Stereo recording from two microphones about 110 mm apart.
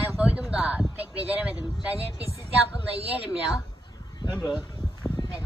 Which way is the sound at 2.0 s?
65° right (ahead or behind).